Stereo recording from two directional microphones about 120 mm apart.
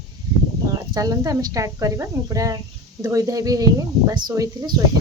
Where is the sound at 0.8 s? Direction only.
30° right (ahead or behind).